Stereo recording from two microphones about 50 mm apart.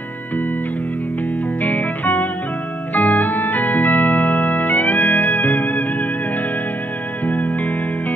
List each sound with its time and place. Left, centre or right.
1.6 s music: left
7.2 s music: left